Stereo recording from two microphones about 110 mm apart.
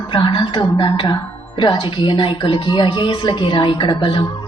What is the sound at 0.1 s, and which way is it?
Speech, 45° left (ahead or behind).